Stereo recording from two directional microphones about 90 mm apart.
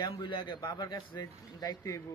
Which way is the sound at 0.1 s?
70° left (ahead or behind).